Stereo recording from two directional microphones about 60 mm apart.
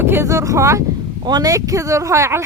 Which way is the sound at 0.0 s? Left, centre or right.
Right.